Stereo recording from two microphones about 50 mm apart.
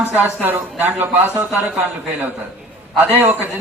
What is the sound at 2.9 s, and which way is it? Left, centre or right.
Speech, right.